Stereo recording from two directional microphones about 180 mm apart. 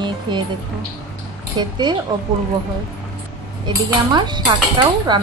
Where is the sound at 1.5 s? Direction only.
25° right (ahead or behind).